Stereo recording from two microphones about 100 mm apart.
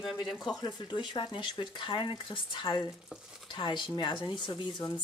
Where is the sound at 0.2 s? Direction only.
45° left (ahead or behind).